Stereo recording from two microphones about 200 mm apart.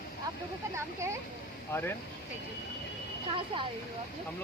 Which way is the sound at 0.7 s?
15° right (ahead or behind).